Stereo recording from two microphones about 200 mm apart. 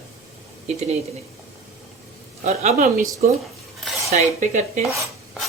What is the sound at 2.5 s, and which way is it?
Speech, 35° right (ahead or behind).